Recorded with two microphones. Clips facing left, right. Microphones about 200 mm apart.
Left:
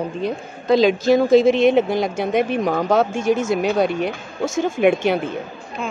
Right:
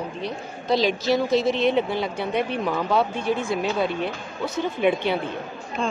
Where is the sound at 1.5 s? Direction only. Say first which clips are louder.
Left 6 dB; 45° left (ahead or behind).